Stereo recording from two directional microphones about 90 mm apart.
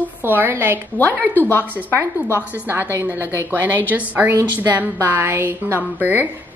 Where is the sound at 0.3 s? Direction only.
20° right (ahead or behind).